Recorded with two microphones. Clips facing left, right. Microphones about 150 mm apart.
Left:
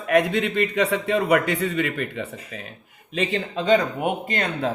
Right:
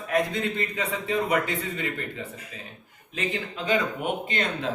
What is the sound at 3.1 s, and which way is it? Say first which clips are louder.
Speech: left 6 dB; 80° left.